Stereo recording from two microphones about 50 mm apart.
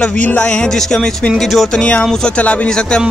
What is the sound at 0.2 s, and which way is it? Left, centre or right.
Music, left.